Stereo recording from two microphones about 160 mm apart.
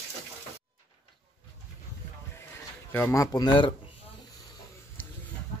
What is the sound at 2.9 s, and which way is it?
Speech, 15° left (ahead or behind).